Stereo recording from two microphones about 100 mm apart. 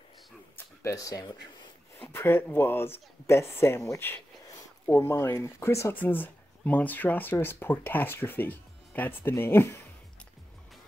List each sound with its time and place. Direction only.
0.8 s speech: 35° left (ahead or behind)
2.0 s speech: 20° left (ahead or behind)